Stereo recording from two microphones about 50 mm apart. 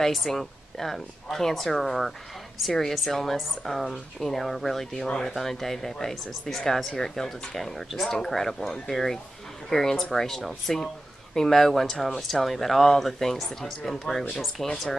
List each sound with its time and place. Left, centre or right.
0.0 s speech: centre